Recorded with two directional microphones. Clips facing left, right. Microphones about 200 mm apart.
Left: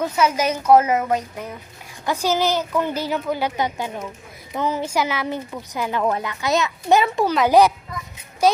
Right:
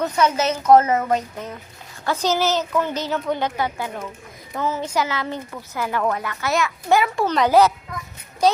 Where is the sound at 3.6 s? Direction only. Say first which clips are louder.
Left 1 dB; 20° left (ahead or behind).